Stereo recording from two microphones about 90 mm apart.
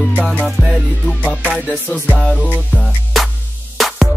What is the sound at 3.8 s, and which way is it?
Music, centre (ahead or behind).